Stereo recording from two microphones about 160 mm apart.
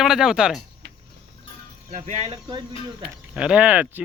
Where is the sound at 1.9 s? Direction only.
40° right (ahead or behind).